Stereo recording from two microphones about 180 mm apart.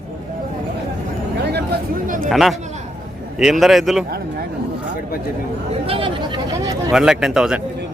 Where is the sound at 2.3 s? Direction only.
Centre (ahead or behind).